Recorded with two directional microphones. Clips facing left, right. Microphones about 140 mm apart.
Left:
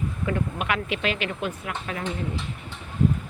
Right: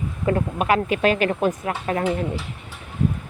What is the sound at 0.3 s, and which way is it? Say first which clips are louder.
Speech: right 8 dB; 40° right (ahead or behind).